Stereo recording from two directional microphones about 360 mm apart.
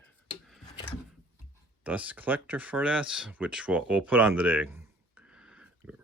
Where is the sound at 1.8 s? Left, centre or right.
Centre.